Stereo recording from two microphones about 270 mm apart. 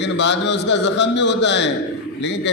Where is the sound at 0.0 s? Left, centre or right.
Left.